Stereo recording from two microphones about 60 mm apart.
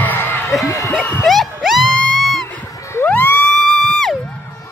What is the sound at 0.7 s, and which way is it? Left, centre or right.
Speech, left.